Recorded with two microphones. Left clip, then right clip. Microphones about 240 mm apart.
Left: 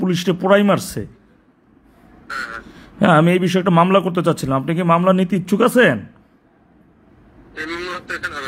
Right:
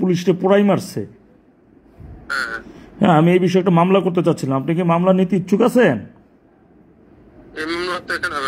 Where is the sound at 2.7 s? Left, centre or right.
Left.